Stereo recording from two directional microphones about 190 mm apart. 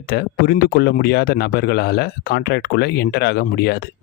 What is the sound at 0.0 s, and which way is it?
Speech, 55° left (ahead or behind).